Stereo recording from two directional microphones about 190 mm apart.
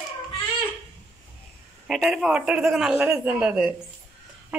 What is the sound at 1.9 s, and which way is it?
A man's voice, centre (ahead or behind).